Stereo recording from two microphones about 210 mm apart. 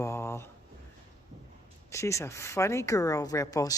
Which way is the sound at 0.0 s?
10° left (ahead or behind).